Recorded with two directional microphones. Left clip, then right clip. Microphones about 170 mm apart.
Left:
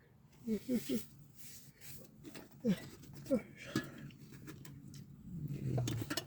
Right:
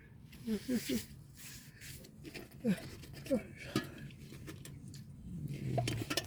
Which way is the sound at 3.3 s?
20° left (ahead or behind).